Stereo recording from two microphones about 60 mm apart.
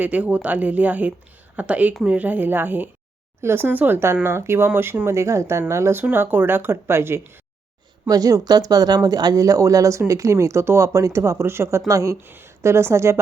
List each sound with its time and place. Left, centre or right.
0.0 s speech: right
5.0 s speech: right
6.0 s speech: right
8.0 s speech: right
11.9 s speech: right
12.2 s speech: right